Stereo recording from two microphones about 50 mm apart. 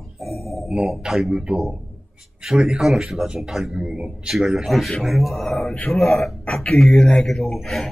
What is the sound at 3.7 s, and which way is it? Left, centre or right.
Speech, centre.